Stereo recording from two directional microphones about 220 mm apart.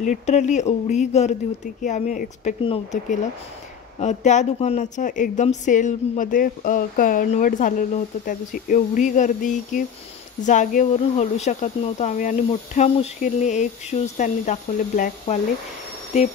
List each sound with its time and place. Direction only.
0.0 s a woman's voice: 35° left (ahead or behind)